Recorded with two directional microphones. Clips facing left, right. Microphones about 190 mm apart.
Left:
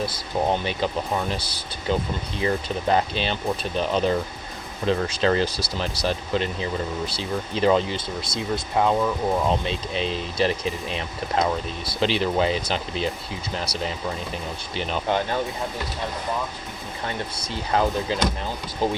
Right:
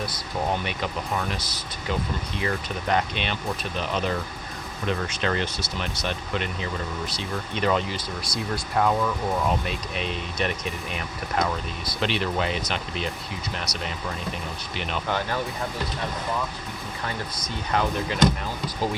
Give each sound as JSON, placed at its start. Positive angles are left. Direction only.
{"t": 0.0, "sound": "speech", "side_deg": 25}
{"t": 15.0, "sound": "speech", "side_deg": 20}
{"t": 17.1, "sound": "speech", "side_deg": 30}